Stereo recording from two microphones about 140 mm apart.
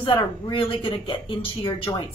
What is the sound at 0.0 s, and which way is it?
Speech, 35° left (ahead or behind).